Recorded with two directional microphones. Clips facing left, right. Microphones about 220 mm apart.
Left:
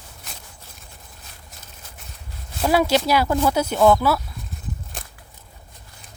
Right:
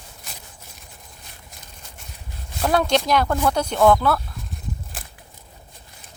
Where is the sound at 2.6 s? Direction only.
5° left (ahead or behind).